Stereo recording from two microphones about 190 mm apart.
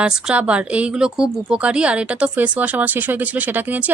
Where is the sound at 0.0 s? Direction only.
5° right (ahead or behind).